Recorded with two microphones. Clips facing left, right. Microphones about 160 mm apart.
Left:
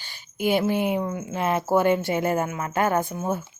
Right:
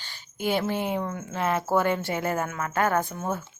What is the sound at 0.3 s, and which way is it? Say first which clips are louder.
A woman's voice: left 4 dB; 15° left (ahead or behind).